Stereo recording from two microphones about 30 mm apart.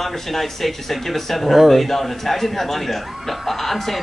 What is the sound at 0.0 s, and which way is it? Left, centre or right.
A man's voice, centre.